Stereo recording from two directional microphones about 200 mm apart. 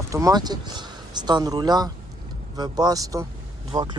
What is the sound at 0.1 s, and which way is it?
Speech, 15° right (ahead or behind).